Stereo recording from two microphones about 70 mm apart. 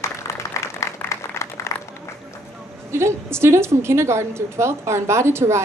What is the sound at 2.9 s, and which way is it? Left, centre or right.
A woman's voice, right.